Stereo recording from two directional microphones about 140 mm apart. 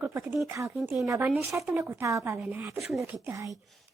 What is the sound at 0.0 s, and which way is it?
A woman's voice, 15° right (ahead or behind).